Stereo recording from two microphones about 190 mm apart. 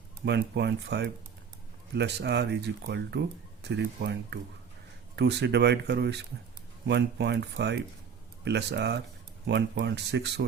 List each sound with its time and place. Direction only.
0.3 s speech: 65° right (ahead or behind)